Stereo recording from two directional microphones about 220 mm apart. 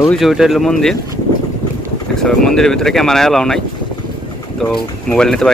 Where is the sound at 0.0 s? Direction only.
Centre (ahead or behind).